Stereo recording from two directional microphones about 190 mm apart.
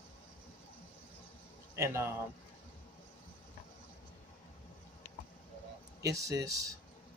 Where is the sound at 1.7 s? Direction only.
15° right (ahead or behind).